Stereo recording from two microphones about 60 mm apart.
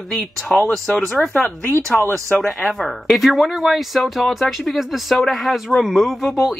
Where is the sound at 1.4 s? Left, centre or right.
Left.